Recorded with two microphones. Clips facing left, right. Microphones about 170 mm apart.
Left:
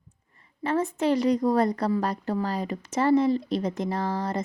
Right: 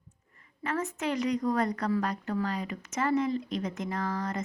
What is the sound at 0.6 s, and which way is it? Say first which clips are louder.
A woman's voice: left 7 dB; 30° left (ahead or behind).